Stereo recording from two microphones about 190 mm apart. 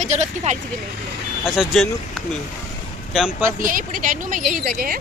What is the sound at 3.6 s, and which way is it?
Speech, 45° right (ahead or behind).